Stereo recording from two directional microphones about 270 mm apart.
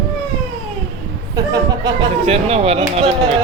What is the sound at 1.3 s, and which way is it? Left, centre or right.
Speech, centre.